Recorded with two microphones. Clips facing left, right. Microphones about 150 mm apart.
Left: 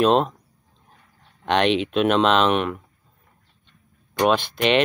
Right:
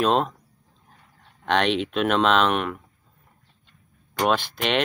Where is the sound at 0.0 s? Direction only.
Centre (ahead or behind).